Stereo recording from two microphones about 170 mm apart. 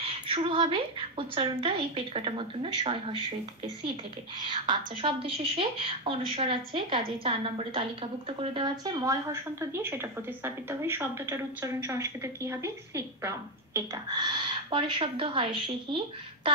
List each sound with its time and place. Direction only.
0.0 s a woman's voice: 30° right (ahead or behind)
4.5 s a woman's voice: 30° right (ahead or behind)